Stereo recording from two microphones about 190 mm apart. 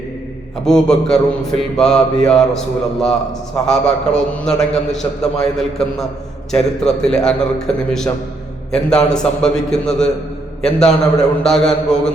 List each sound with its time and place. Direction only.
0.6 s mantra: 5° left (ahead or behind)